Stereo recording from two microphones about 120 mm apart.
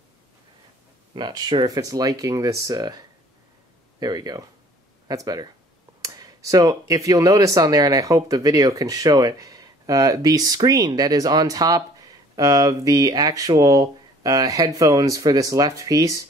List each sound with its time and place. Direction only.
1.1 s speech: 35° right (ahead or behind)